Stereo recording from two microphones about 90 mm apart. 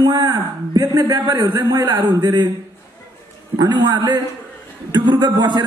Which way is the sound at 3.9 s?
55° right (ahead or behind).